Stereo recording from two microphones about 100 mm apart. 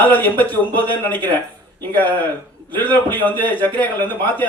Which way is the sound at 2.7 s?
20° left (ahead or behind).